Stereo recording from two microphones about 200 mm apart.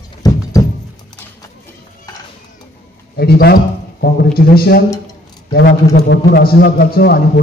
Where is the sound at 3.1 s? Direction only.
50° left (ahead or behind).